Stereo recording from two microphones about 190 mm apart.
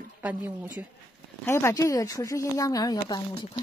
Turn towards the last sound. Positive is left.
turn(degrees=20)  # may be behind; listen again after turning